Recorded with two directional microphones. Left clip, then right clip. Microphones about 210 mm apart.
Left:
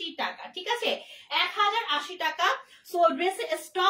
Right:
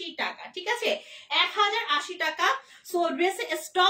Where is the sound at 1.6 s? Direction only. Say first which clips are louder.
Right 1 dB; 20° right (ahead or behind).